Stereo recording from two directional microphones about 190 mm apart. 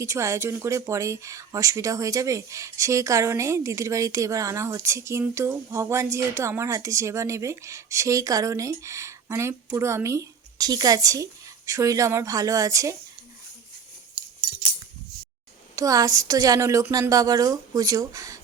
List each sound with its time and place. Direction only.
0.0 s speech: 15° right (ahead or behind)
15.7 s speech: 20° right (ahead or behind)